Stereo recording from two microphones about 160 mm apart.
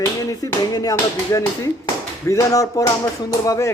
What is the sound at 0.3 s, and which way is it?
Speech, 20° left (ahead or behind).